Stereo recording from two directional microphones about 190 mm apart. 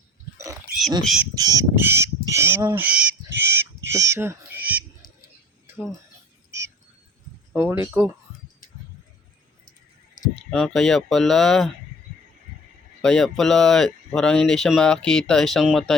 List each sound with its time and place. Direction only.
0.3 s a sound: 15° right (ahead or behind)
1.0 s speech: centre (ahead or behind)
1.4 s speech: 20° right (ahead or behind)
7.5 s speech: 10° right (ahead or behind)
10.5 s speech: centre (ahead or behind)
13.0 s speech: 5° left (ahead or behind)